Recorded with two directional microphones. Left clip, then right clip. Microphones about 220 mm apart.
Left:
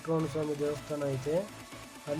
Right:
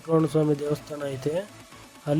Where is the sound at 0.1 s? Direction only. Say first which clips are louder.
Right 9 dB; 30° right (ahead or behind).